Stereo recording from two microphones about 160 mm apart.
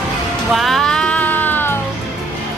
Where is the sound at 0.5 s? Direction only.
Centre (ahead or behind).